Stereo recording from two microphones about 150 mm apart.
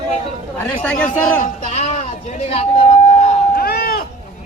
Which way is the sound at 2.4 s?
40° left (ahead or behind).